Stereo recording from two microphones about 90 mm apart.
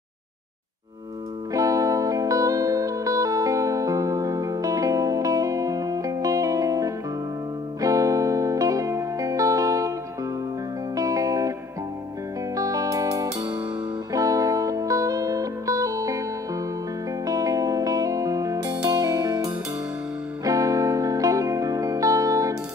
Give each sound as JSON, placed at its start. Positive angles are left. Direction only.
{"t": 1.5, "sound": "music", "side_deg": -40}
{"t": 11.0, "sound": "music", "side_deg": -40}
{"t": 12.5, "sound": "music", "side_deg": -40}